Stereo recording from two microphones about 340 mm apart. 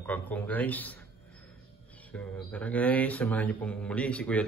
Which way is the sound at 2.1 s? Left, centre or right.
Centre.